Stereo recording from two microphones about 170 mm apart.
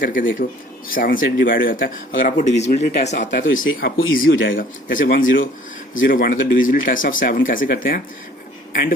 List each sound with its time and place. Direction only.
0.0 s speech: 55° left (ahead or behind)
3.4 s speech: 65° left (ahead or behind)
4.5 s speech: 55° left (ahead or behind)
5.1 s speech: 90° left
6.0 s speech: 55° left (ahead or behind)